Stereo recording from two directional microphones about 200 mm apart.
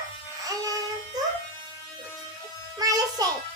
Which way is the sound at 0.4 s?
20° right (ahead or behind).